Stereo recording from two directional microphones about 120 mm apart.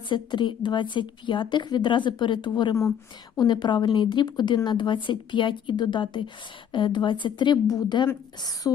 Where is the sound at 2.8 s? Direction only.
25° left (ahead or behind).